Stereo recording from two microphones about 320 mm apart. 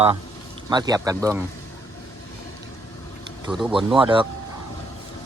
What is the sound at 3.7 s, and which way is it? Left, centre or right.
Speech, centre.